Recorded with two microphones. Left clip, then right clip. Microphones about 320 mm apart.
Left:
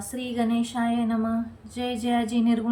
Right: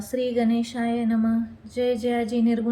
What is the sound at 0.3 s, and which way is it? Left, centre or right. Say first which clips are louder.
Speech: right 2 dB; left.